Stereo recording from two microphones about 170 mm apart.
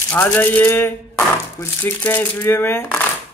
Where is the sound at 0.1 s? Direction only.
10° left (ahead or behind).